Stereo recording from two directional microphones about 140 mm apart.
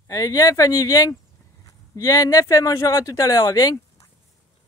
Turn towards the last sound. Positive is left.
turn(degrees=25)  # may be behind; listen again after turning